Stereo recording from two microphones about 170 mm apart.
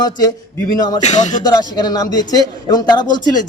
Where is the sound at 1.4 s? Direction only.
25° left (ahead or behind).